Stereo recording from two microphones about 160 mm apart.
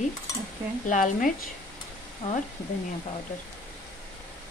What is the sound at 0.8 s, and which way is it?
Speech, 55° left (ahead or behind).